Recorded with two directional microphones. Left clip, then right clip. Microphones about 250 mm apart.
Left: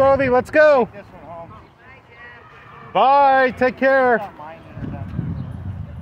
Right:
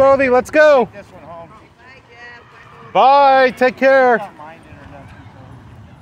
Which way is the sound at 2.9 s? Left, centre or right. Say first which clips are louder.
Right 4 dB; centre.